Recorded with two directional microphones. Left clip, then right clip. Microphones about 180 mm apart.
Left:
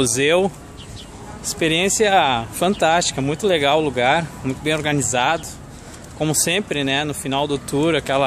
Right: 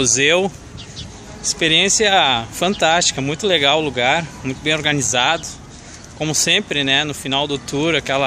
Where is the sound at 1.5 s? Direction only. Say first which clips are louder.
Right 4 dB; centre (ahead or behind).